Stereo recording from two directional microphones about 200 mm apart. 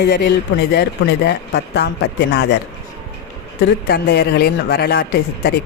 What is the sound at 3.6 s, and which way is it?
Speech, 55° left (ahead or behind).